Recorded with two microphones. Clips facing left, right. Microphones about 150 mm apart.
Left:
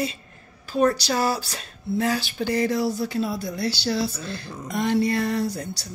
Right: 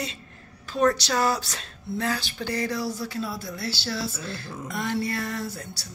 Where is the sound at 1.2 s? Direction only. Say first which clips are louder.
Left 1 dB; 5° left (ahead or behind).